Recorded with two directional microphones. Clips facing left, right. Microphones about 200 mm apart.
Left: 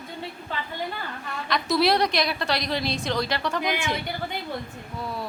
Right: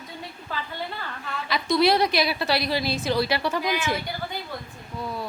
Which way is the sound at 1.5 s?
Centre (ahead or behind).